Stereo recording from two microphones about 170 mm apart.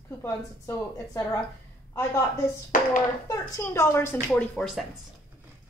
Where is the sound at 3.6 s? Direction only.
15° left (ahead or behind).